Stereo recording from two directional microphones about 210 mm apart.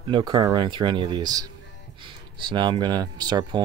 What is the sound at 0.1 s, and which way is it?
Speech, 20° right (ahead or behind).